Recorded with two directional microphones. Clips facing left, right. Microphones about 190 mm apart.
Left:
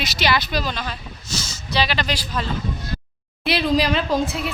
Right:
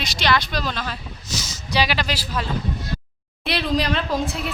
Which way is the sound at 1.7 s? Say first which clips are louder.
Even; 10° right (ahead or behind).